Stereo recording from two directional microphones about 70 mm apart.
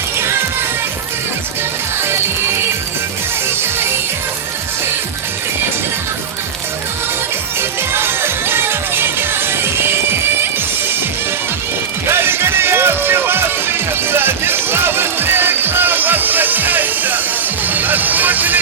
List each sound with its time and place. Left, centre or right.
0.2 s music: right
2.0 s music: right
7.6 s music: right
12.0 s music: right
17.7 s vehicle: right